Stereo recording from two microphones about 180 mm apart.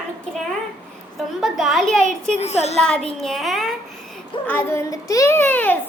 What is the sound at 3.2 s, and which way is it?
Speech, centre (ahead or behind).